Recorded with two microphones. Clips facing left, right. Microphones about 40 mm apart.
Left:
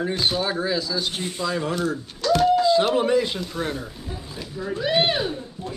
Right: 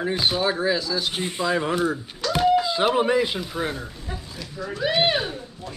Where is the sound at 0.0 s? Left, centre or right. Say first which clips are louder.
Right 1 dB; centre.